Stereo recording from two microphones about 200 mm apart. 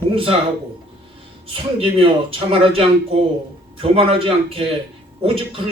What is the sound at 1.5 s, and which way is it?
Speech, 25° right (ahead or behind).